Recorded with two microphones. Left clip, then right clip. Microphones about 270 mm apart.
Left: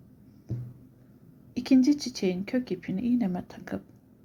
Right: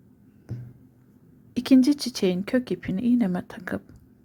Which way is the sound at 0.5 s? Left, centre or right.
Centre.